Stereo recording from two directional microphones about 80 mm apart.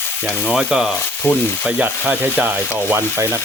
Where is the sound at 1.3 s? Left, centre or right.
Left.